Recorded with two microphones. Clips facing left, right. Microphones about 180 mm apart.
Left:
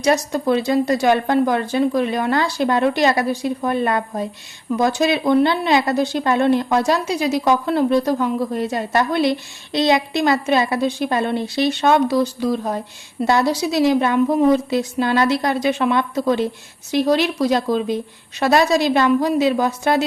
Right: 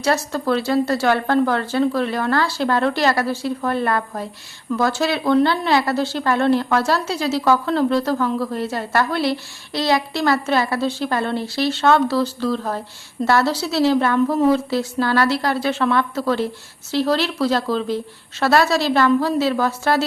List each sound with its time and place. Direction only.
0.0 s a woman's voice: 15° left (ahead or behind)